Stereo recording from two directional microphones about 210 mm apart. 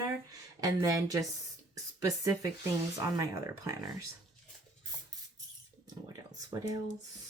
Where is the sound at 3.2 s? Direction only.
15° right (ahead or behind).